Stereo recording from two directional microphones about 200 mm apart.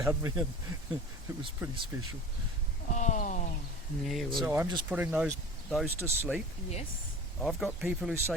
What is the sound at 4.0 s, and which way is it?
Speech, centre (ahead or behind).